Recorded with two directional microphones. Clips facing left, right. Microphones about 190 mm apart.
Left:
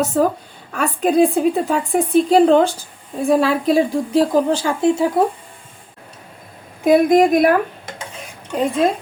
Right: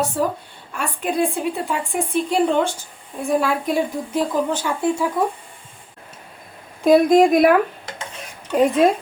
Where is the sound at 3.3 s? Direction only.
90° left.